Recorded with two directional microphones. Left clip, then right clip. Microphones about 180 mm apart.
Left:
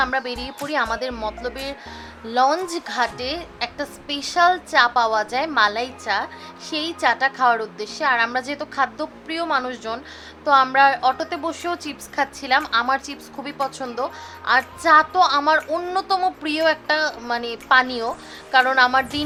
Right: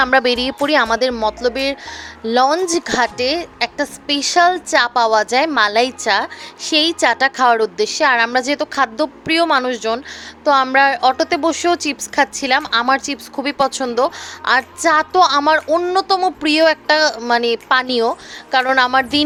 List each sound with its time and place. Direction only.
0.0 s a woman's voice: 50° right (ahead or behind)